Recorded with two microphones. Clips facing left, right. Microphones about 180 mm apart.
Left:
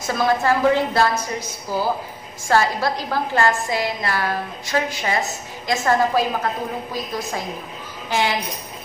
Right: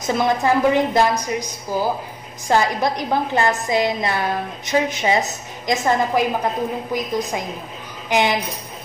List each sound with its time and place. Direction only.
0.0 s a woman's voice: 20° right (ahead or behind)